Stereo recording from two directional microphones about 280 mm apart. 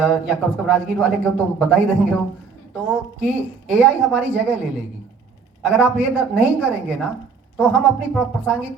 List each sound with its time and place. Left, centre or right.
0.0 s speech: centre